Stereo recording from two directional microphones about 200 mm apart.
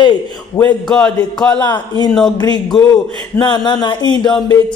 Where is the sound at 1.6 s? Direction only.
20° left (ahead or behind).